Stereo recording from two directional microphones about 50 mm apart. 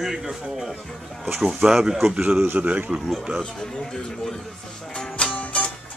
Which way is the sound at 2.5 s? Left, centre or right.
Right.